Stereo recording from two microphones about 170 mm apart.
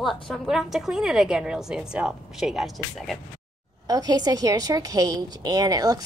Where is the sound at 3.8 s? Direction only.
20° right (ahead or behind).